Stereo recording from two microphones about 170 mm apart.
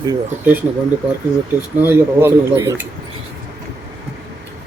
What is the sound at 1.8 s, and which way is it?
Speech, 15° right (ahead or behind).